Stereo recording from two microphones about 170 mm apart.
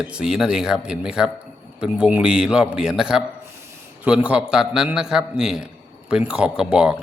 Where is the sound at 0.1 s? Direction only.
5° right (ahead or behind).